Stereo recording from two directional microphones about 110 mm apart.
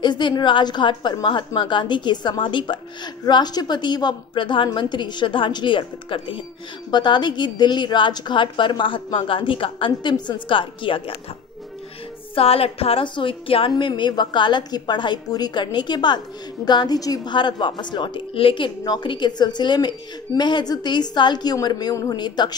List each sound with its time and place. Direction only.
0.0 s a woman's voice: 45° left (ahead or behind)
6.9 s a woman's voice: 40° left (ahead or behind)
12.4 s a woman's voice: 60° left (ahead or behind); by 22.6 s 40° left (ahead or behind)